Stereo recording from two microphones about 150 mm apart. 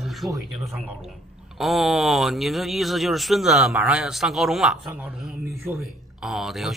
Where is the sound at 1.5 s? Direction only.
Centre (ahead or behind).